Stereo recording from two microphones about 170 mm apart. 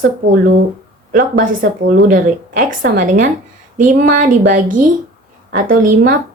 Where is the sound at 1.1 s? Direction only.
50° right (ahead or behind).